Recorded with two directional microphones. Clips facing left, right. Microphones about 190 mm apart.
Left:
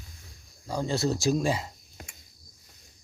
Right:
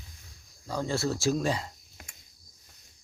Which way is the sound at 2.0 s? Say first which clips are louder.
Left 6 dB; 35° left (ahead or behind).